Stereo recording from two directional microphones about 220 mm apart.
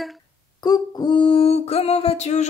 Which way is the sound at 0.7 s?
20° left (ahead or behind).